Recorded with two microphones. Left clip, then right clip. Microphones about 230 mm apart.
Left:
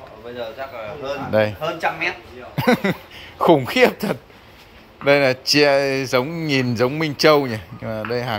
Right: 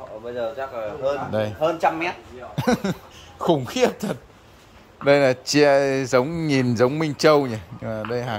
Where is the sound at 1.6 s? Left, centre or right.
Right.